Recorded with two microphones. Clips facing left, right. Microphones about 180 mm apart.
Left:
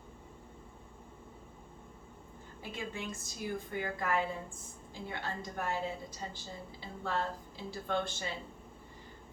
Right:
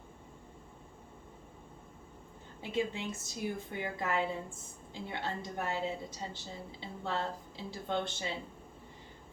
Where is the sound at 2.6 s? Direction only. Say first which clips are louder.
Right 6 dB; 25° right (ahead or behind).